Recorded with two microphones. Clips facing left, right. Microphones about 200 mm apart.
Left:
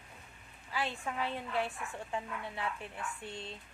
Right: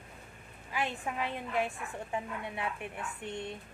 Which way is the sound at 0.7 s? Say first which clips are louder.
Right 2 dB; 15° right (ahead or behind).